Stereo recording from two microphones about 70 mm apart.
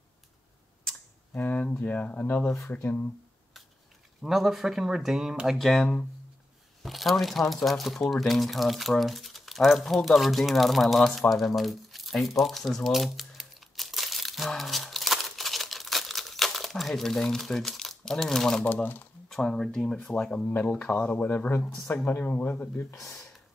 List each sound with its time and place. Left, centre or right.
1.3 s speech: left
4.2 s speech: centre
5.6 s speech: centre
14.5 s crumpling: centre
18.6 s speech: left
19.2 s speech: centre
20.1 s speech: centre
21.5 s speech: left